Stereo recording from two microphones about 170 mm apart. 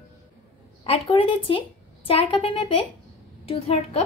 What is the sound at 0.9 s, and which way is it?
Speech, 30° left (ahead or behind).